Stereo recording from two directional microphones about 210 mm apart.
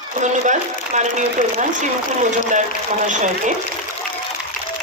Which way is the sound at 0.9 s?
35° right (ahead or behind).